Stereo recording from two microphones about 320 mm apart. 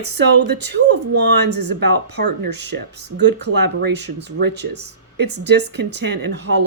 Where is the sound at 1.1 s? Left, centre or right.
Right.